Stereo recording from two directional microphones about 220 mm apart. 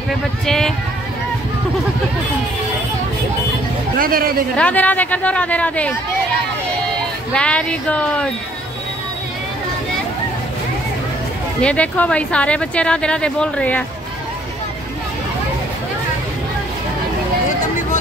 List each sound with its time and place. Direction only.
0.5 s speech: centre (ahead or behind)
4.0 s speech: 40° right (ahead or behind)
4.6 s speech: 5° left (ahead or behind)
7.3 s speech: 5° left (ahead or behind)
11.6 s speech: 5° left (ahead or behind)